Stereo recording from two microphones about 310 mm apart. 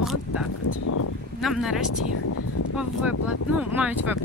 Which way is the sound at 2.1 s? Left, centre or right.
Left.